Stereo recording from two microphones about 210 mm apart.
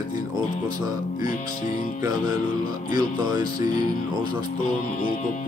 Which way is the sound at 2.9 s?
20° right (ahead or behind).